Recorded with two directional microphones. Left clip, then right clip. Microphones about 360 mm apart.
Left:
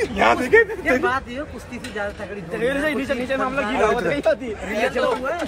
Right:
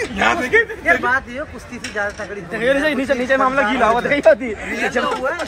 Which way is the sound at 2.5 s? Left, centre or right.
Right.